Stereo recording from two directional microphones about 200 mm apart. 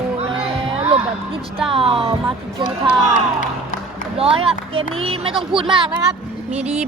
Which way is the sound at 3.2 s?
40° left (ahead or behind).